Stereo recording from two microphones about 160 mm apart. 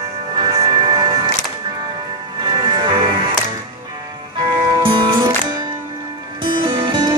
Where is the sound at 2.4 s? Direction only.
30° right (ahead or behind).